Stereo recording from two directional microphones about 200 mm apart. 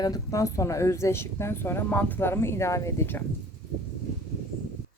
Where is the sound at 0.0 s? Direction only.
15° left (ahead or behind).